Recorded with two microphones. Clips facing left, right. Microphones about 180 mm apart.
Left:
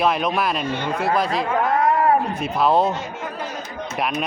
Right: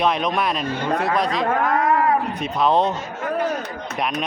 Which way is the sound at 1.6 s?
35° left (ahead or behind).